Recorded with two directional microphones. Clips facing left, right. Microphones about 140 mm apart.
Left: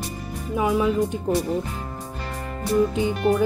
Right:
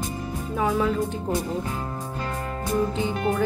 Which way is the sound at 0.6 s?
15° left (ahead or behind).